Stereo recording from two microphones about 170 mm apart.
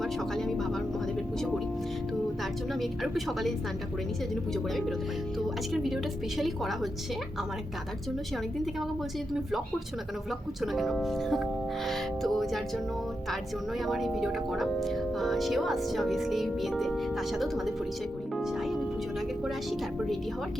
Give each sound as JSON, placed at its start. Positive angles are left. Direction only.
{"t": 0.0, "sound": "speech", "side_deg": 0}
{"t": 4.5, "sound": "speech", "side_deg": 0}
{"t": 9.3, "sound": "speech", "side_deg": 0}
{"t": 18.3, "sound": "music", "side_deg": 0}
{"t": 19.5, "sound": "speech", "side_deg": 0}